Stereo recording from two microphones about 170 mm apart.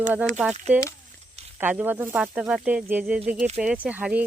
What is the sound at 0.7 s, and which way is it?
Speech, 10° right (ahead or behind).